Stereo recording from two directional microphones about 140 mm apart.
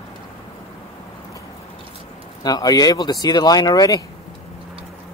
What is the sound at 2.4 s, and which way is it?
Speech, 25° left (ahead or behind).